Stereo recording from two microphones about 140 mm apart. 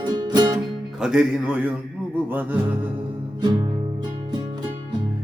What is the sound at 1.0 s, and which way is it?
Music, 5° right (ahead or behind).